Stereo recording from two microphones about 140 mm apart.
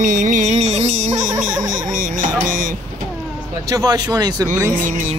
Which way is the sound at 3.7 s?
25° right (ahead or behind).